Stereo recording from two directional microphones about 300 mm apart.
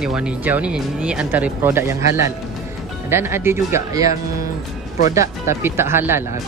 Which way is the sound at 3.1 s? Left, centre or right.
Centre.